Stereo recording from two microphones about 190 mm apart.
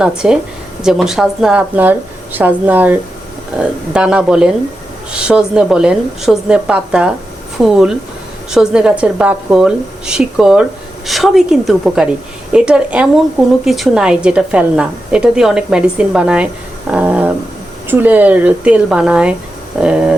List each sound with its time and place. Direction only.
0.2 s a woman's voice: 5° right (ahead or behind)